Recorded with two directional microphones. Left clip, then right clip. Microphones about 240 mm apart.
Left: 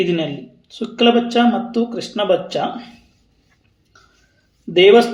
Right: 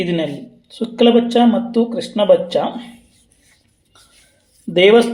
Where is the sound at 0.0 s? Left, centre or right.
Centre.